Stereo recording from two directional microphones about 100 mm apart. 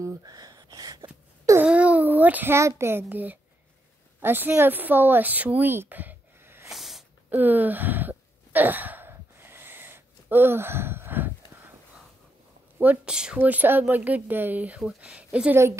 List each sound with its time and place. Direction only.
0.0 s a sound: 40° right (ahead or behind)
1.6 s babbling: 15° right (ahead or behind)
2.8 s a child's voice: 25° right (ahead or behind)
6.7 s snort: 5° right (ahead or behind)
7.2 s gasp: 20° right (ahead or behind)
12.7 s a woman's voice: 20° right (ahead or behind)
15.5 s a child's voice: 30° right (ahead or behind)